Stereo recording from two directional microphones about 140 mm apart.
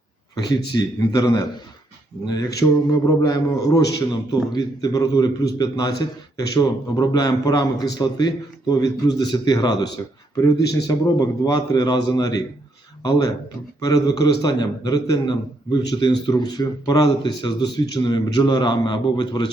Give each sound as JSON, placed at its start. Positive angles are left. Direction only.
{"t": 0.3, "sound": "a man's voice", "side_deg": 30}